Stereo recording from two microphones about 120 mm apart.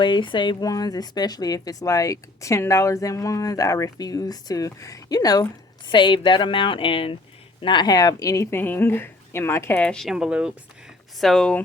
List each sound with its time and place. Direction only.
0.0 s speech: 40° left (ahead or behind); by 11.5 s 5° left (ahead or behind)